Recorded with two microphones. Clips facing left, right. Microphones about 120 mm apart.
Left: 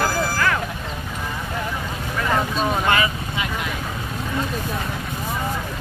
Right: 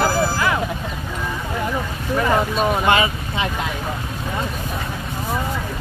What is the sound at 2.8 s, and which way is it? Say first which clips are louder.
Boat: right 3 dB; 25° right (ahead or behind).